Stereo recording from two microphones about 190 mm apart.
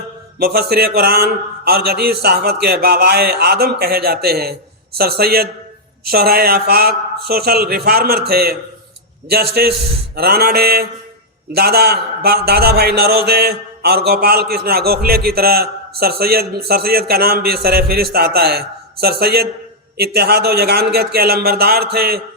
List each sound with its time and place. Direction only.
0.3 s a man's voice: 55° right (ahead or behind)